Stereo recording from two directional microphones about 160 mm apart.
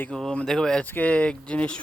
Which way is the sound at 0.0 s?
5° left (ahead or behind).